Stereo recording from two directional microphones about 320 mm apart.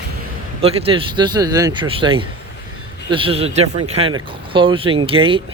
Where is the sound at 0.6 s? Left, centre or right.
Centre.